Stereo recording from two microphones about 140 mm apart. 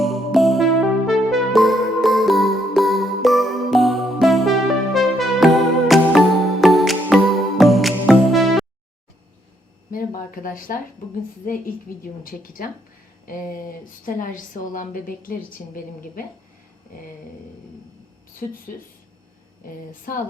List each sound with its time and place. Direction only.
0.0 s music: centre (ahead or behind)
9.9 s a sound: 85° left
11.4 s a woman's voice: 90° left
18.7 s speech: 70° left (ahead or behind)
19.6 s a woman's voice: 85° left